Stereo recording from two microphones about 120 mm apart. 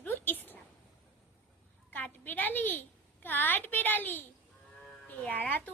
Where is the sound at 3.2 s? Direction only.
15° left (ahead or behind).